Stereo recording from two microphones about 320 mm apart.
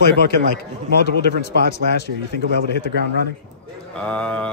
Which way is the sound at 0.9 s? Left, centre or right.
Left.